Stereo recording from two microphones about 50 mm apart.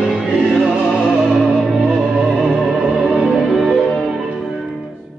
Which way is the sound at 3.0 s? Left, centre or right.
Centre.